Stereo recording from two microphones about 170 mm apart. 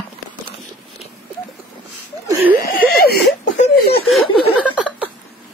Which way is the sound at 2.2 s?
10° right (ahead or behind).